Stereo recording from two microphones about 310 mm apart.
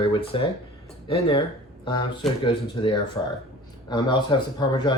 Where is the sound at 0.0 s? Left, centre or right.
Centre.